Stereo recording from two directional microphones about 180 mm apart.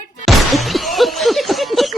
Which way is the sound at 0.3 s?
Centre (ahead or behind).